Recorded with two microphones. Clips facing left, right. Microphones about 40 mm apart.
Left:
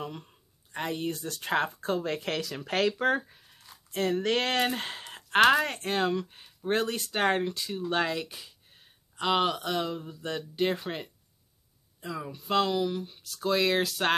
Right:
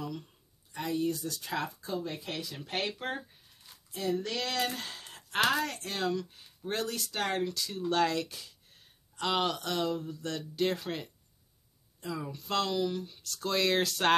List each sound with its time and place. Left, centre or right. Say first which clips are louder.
0.0 s speech: left 1 dB; left
2.0 s speech: left 7 dB; left
3.9 s speech: left 6 dB; left; by 14.1 s centre